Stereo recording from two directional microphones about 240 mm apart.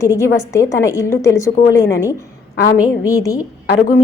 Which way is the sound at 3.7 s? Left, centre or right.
Left.